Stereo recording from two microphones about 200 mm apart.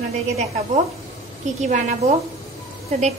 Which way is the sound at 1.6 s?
35° right (ahead or behind).